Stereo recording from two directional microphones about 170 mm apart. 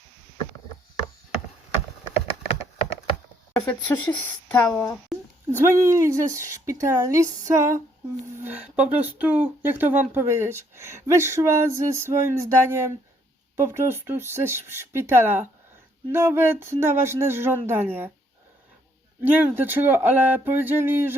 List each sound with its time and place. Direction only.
2.1 s a sound: 35° left (ahead or behind)
3.5 s speech: 10° left (ahead or behind)
5.5 s speech: 15° right (ahead or behind)
19.2 s speech: 10° right (ahead or behind)